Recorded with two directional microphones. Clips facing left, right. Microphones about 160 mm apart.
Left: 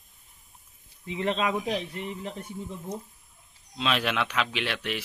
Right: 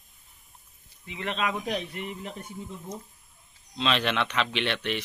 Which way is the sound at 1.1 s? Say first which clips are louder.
Left 3 dB; 30° left (ahead or behind).